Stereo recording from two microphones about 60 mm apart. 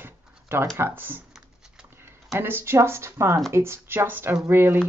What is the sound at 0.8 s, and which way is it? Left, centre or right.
Speech, right.